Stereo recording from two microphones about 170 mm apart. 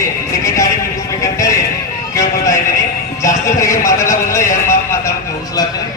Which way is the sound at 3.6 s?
20° left (ahead or behind).